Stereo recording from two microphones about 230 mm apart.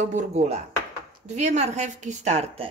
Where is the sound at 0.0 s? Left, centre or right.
Right.